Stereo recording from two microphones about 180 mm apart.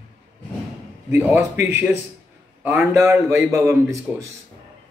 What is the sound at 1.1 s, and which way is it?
A man's voice, 10° right (ahead or behind).